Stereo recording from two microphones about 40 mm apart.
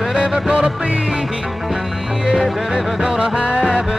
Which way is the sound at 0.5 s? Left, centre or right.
Right.